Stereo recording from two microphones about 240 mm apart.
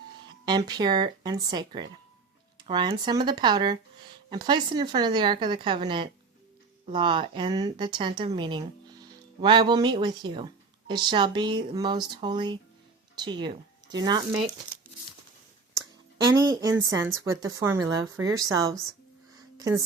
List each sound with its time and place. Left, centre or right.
0.3 s speech: centre
16.5 s speech: centre